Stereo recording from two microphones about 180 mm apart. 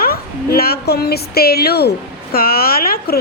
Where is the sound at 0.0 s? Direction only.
55° left (ahead or behind).